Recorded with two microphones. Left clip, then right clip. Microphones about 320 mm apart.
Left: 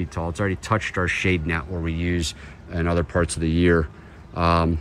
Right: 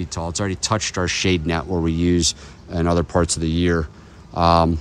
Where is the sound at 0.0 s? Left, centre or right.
Centre.